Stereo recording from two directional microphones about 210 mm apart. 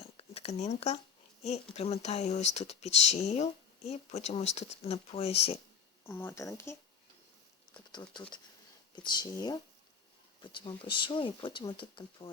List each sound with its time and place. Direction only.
0.2 s a sound: 30° left (ahead or behind)
1.7 s speech: 30° left (ahead or behind)
6.1 s speech: 10° left (ahead or behind)